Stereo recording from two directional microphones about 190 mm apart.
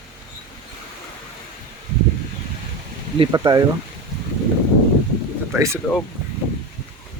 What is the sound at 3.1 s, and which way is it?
Speech, 20° right (ahead or behind).